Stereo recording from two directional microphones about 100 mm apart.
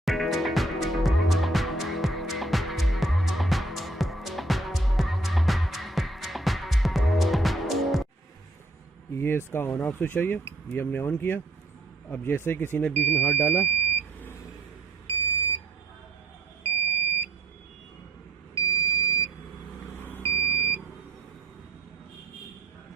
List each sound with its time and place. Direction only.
0.0 s music: centre (ahead or behind)
9.1 s a sound: 25° left (ahead or behind)
9.5 s speech: 25° left (ahead or behind)
13.6 s smoke detector: 20° left (ahead or behind)
16.7 s smoke detector: 20° left (ahead or behind)
18.5 s smoke detector: 40° left (ahead or behind)
20.0 s vehicle: 20° left (ahead or behind)
20.3 s beep: 25° left (ahead or behind)